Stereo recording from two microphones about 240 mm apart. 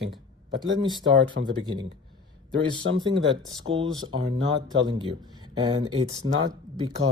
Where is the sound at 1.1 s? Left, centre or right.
Right.